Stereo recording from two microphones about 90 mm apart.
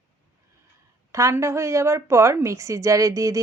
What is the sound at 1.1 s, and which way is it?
A woman's voice, 35° right (ahead or behind).